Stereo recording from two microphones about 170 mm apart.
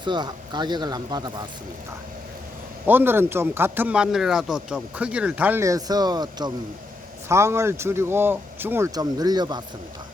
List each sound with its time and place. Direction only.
0.0 s speech: 25° right (ahead or behind)
2.8 s speech: 10° right (ahead or behind)